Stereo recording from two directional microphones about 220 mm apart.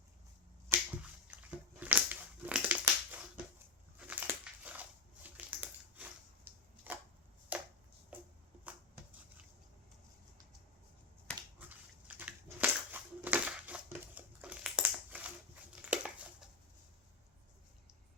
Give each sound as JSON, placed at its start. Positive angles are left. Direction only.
{"t": 0.7, "sound": "finger snapping", "side_deg": -10}
{"t": 1.3, "sound": "a sound", "side_deg": -5}
{"t": 1.8, "sound": "crushing", "side_deg": -10}
{"t": 4.0, "sound": "dog", "side_deg": -10}
{"t": 5.2, "sound": "a sound", "side_deg": -5}
{"t": 12.0, "sound": "crushing", "side_deg": -5}
{"t": 15.8, "sound": "dog", "side_deg": -5}